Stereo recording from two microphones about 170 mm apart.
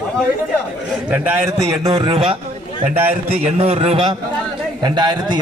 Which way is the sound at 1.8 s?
35° right (ahead or behind).